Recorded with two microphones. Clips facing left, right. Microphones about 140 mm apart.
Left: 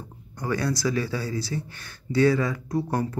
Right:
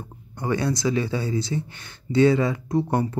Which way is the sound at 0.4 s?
20° right (ahead or behind).